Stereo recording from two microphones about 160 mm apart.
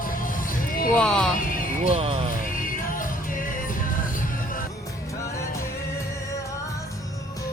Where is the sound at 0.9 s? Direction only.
5° left (ahead or behind).